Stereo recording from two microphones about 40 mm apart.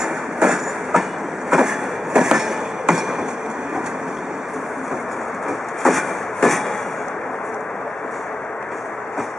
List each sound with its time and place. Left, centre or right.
0.0 s train: centre
0.9 s train: centre
5.8 s vehicle: centre